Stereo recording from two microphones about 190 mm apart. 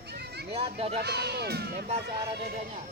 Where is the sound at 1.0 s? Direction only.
60° right (ahead or behind).